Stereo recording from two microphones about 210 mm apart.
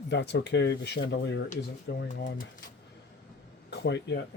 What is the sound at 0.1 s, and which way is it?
Speech, 55° left (ahead or behind).